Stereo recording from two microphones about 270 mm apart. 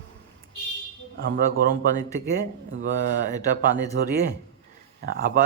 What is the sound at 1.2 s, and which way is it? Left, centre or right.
Speech, right.